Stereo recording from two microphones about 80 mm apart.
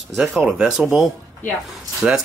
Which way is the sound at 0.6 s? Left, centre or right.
Centre.